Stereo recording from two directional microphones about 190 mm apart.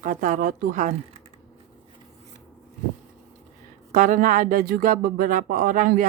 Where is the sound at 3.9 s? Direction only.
40° right (ahead or behind).